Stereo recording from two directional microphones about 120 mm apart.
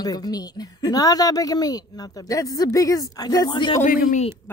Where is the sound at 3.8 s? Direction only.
85° left.